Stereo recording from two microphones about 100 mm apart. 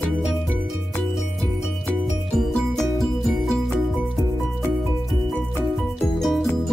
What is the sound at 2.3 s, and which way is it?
Music, 5° left (ahead or behind).